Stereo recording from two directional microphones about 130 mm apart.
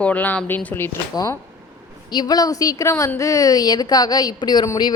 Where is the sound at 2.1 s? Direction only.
30° left (ahead or behind).